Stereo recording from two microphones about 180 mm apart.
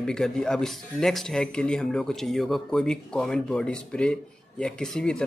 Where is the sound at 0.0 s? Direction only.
5° left (ahead or behind).